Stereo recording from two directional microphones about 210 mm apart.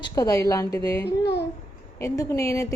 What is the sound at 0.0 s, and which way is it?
A woman's voice, 15° left (ahead or behind).